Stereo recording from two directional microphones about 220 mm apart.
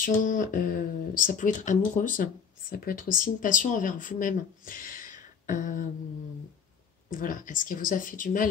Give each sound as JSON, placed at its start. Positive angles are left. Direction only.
{"t": 0.0, "sound": "speech", "side_deg": 35}
{"t": 7.1, "sound": "speech", "side_deg": 35}